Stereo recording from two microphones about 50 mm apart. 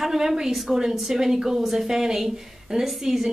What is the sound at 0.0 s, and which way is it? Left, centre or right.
A woman's voice, centre.